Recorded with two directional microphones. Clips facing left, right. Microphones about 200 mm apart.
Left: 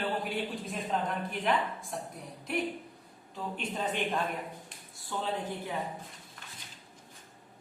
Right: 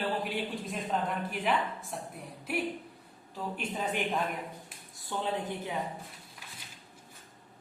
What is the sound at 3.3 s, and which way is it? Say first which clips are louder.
Speech: even; 5° right (ahead or behind).